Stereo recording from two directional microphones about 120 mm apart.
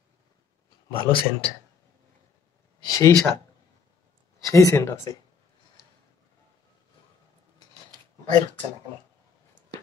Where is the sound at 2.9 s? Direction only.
25° left (ahead or behind).